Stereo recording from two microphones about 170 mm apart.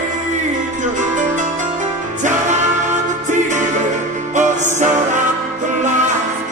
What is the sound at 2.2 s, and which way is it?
Music, 45° right (ahead or behind).